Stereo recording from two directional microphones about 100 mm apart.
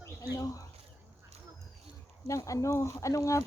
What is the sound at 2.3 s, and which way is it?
Speech, 30° left (ahead or behind).